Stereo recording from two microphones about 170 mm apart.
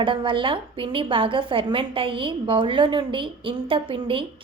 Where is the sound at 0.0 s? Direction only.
30° right (ahead or behind).